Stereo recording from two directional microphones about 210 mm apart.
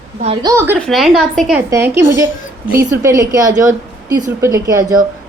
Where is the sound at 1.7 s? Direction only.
15° right (ahead or behind).